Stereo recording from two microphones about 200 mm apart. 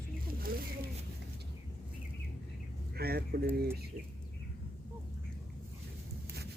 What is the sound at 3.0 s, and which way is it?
Speech, 50° right (ahead or behind).